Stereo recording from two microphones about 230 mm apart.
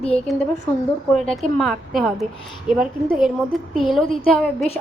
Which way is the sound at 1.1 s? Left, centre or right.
Centre.